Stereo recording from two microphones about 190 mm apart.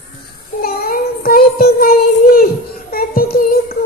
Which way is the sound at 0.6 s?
50° left (ahead or behind).